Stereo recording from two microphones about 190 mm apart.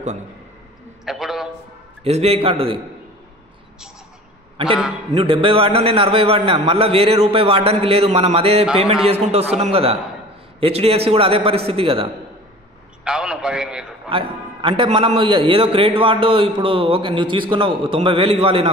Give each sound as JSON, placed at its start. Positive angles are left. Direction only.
{"t": 1.0, "sound": "a sound", "side_deg": 0}
{"t": 2.0, "sound": "a man's voice", "side_deg": -35}
{"t": 5.1, "sound": "a man's voice", "side_deg": -25}
{"t": 13.0, "sound": "a man's voice", "side_deg": -5}
{"t": 14.0, "sound": "a man's voice", "side_deg": -30}